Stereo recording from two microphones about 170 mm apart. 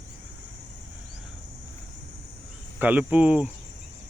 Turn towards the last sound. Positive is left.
turn(degrees=-5)  # may be behind; listen again after turning